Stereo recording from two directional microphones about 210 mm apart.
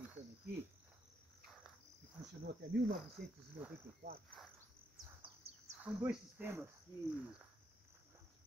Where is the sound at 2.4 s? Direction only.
50° right (ahead or behind).